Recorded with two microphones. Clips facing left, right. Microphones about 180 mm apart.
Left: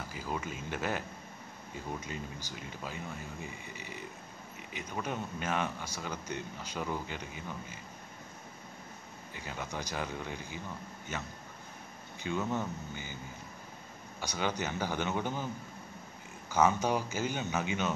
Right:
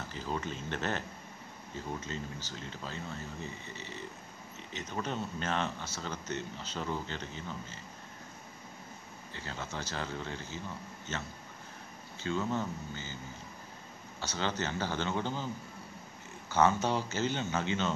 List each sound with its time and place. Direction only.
0.1 s speech: 10° left (ahead or behind)
9.3 s speech: 15° left (ahead or behind)
14.2 s speech: 15° left (ahead or behind)